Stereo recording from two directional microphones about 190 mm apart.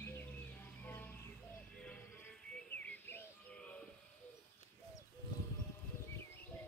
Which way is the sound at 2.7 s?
10° left (ahead or behind).